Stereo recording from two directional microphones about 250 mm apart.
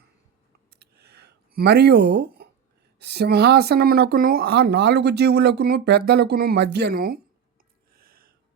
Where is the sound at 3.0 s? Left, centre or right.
Right.